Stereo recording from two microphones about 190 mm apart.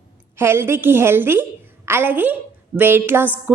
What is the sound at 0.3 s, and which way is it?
A woman's voice, 15° right (ahead or behind).